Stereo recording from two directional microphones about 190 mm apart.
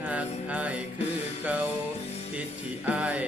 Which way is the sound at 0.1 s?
5° right (ahead or behind).